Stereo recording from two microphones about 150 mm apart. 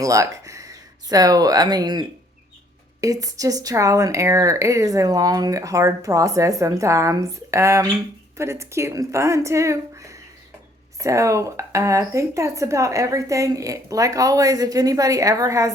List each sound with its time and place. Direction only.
0.0 s speech: 20° right (ahead or behind)